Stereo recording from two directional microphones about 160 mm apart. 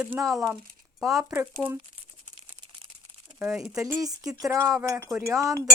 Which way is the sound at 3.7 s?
20° right (ahead or behind).